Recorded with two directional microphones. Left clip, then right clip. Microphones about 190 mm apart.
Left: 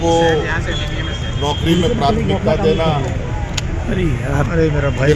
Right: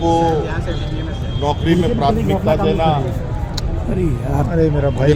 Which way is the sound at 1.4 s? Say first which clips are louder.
Even; 25° right (ahead or behind).